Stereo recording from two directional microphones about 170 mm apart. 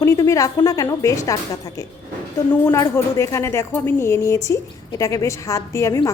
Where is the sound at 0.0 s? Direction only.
15° left (ahead or behind).